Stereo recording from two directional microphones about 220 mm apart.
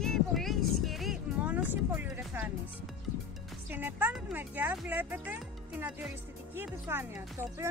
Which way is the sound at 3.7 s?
10° right (ahead or behind).